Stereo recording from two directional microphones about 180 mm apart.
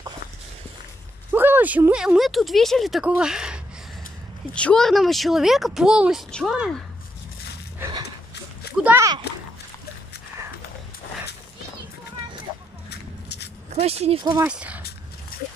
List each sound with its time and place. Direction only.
1.3 s speech: 10° right (ahead or behind)
8.8 s speech: 15° right (ahead or behind)
12.9 s a sound: 65° left (ahead or behind)
13.7 s speech: 35° right (ahead or behind)
14.4 s speech: 5° right (ahead or behind)